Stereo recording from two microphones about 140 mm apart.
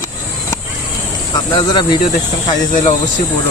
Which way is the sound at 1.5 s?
35° left (ahead or behind).